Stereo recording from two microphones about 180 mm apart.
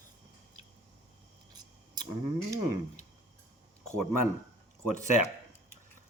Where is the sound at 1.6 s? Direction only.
20° right (ahead or behind).